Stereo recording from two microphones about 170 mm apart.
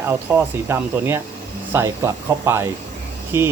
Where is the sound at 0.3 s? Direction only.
15° right (ahead or behind).